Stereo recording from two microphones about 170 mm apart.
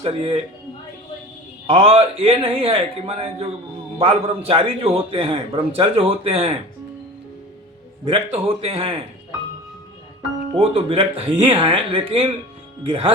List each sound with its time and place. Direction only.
0.0 s a man's voice: 30° right (ahead or behind)
1.6 s a man's voice: 35° right (ahead or behind)
8.0 s a man's voice: 30° right (ahead or behind)
10.5 s a man's voice: 35° right (ahead or behind)